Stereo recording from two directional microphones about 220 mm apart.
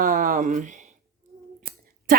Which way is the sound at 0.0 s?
40° right (ahead or behind).